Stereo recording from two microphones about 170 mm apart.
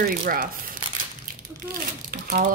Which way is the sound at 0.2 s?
55° right (ahead or behind).